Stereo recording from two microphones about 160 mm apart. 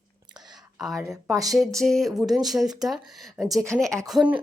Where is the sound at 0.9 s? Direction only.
20° right (ahead or behind).